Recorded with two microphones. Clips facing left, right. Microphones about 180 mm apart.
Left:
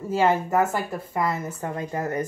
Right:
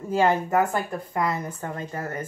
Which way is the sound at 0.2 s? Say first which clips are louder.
Even; centre (ahead or behind).